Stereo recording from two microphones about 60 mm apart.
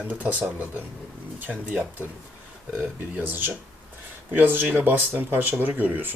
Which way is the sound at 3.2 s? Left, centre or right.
Right.